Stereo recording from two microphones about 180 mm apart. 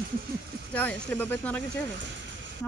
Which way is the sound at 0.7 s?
10° left (ahead or behind).